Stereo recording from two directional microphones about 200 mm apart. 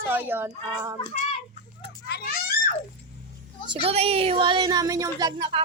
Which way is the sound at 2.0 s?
50° left (ahead or behind).